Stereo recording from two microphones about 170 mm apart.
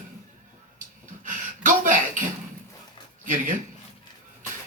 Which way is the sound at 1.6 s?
50° right (ahead or behind).